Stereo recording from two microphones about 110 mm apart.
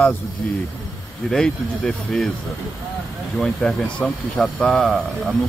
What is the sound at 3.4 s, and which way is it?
Speech, 5° left (ahead or behind).